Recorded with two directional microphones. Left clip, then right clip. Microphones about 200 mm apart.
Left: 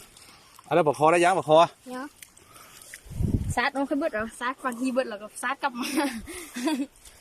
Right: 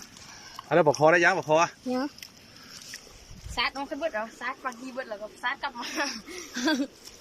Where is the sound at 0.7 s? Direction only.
10° left (ahead or behind).